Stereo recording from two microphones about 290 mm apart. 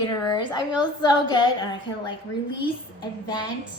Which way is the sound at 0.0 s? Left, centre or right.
Centre.